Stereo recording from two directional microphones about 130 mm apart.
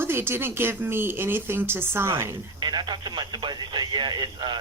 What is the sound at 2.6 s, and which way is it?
Speech, 35° right (ahead or behind).